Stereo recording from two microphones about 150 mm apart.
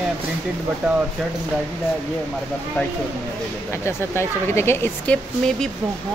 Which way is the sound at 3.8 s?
15° left (ahead or behind).